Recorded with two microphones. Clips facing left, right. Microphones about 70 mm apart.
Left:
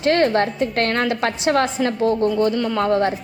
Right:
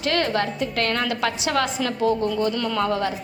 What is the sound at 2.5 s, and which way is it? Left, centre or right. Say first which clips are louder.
Speech: left 4 dB; left.